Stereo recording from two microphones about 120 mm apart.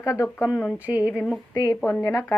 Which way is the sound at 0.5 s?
5° left (ahead or behind).